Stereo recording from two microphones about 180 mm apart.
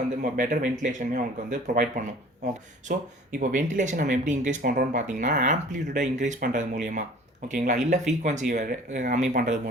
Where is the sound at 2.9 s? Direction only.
55° right (ahead or behind).